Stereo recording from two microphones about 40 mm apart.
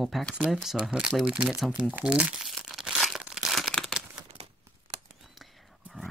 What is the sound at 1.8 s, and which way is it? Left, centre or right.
Speech, right.